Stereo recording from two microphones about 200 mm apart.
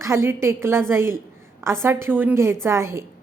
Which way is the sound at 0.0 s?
15° right (ahead or behind).